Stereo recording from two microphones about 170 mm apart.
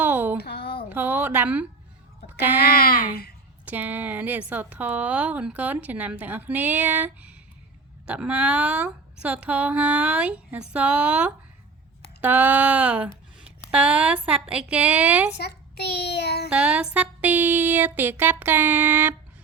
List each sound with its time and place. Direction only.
0.0 s a sound: 10° right (ahead or behind)
0.4 s a sound: 70° left (ahead or behind)
0.9 s speech: 10° right (ahead or behind)
2.6 s speech: 60° left (ahead or behind)
3.7 s a woman's voice: 10° right (ahead or behind)
15.4 s child singing: 70° left (ahead or behind)
16.5 s a woman's voice: 5° right (ahead or behind)